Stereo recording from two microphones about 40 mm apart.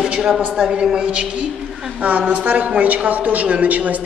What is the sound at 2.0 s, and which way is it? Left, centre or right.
A woman's voice, right.